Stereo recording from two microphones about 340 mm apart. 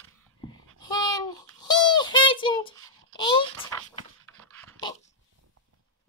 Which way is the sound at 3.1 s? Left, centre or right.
Centre.